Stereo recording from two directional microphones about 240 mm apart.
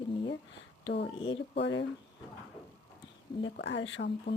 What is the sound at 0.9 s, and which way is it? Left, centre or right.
Speech, left.